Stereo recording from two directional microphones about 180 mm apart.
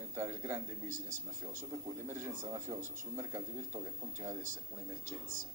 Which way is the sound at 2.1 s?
15° right (ahead or behind).